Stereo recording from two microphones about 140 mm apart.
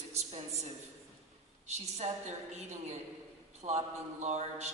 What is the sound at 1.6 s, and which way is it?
A woman's voice, 50° right (ahead or behind).